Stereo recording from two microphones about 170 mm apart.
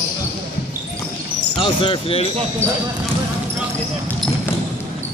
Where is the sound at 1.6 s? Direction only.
30° left (ahead or behind).